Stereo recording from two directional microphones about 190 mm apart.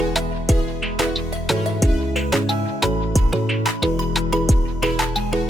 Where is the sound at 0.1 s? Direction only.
Centre (ahead or behind).